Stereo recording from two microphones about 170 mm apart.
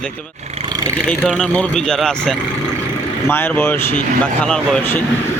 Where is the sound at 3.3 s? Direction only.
15° left (ahead or behind).